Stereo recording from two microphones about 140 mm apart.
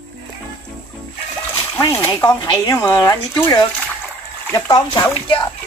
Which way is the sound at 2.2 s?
30° left (ahead or behind).